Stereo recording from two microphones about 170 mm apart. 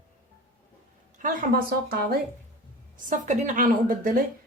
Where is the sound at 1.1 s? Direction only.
50° right (ahead or behind).